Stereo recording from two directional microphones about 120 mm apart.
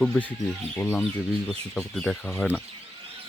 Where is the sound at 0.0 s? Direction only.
10° left (ahead or behind).